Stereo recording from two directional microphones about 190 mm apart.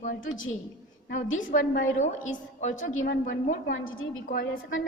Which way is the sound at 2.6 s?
40° left (ahead or behind).